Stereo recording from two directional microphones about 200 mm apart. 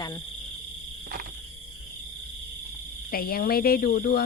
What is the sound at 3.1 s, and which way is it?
Speech, 50° left (ahead or behind).